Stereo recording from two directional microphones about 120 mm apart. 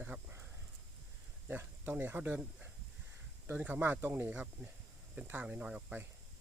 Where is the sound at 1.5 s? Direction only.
15° right (ahead or behind).